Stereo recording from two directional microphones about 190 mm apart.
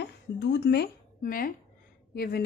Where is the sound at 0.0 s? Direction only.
65° left (ahead or behind).